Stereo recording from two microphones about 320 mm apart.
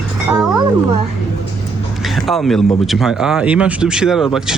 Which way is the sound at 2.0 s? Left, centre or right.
Centre.